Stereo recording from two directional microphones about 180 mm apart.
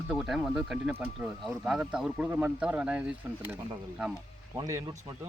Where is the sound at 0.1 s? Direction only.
Centre (ahead or behind).